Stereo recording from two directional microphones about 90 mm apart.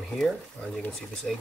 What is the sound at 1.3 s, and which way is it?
Speech, 5° left (ahead or behind).